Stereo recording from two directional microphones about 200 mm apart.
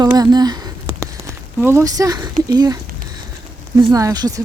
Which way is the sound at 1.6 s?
10° right (ahead or behind).